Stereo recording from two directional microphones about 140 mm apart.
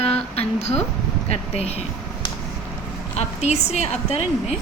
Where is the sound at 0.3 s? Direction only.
50° left (ahead or behind).